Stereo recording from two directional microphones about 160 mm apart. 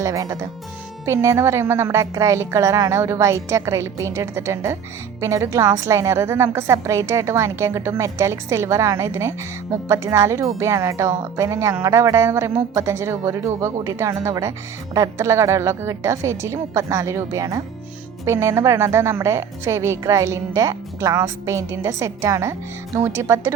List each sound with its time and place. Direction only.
0.0 s a woman's voice: 20° right (ahead or behind)